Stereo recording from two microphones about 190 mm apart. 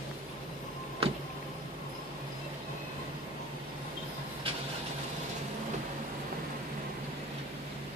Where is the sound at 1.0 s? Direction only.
30° right (ahead or behind).